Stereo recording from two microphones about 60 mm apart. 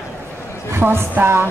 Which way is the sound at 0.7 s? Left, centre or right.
Right.